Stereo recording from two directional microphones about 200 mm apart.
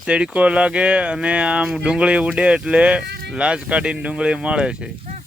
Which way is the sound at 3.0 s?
55° right (ahead or behind).